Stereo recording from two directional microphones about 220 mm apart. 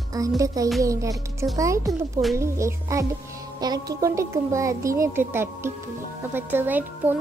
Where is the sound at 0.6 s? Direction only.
15° right (ahead or behind).